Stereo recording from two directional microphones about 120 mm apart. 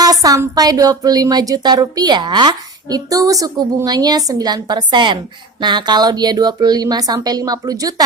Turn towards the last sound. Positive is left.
turn(degrees=-30)  # may be behind; listen again after turning